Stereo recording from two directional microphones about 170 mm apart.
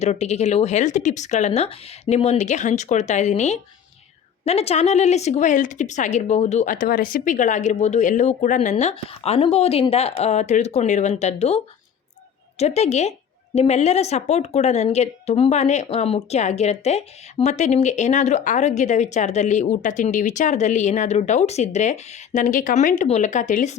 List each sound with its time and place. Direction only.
0.0 s a woman's voice: 40° left (ahead or behind)